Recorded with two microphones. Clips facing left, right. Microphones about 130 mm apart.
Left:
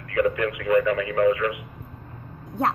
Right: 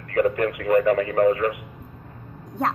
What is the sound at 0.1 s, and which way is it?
Speech, 40° right (ahead or behind).